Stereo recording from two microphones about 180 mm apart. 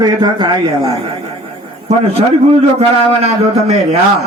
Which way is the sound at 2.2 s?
35° right (ahead or behind).